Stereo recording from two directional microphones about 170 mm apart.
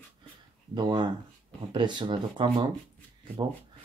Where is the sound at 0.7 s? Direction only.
25° right (ahead or behind).